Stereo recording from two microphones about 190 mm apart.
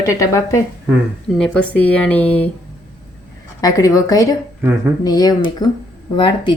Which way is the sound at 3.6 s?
20° left (ahead or behind).